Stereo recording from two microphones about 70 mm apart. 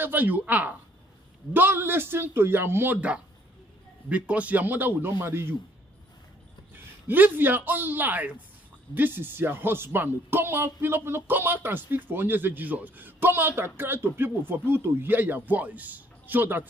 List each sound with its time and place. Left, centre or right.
0.0 s speech: right
4.1 s speech: centre; by 5.6 s right
6.7 s a man's voice: right